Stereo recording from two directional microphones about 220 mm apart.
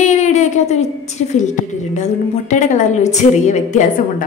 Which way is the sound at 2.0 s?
35° left (ahead or behind).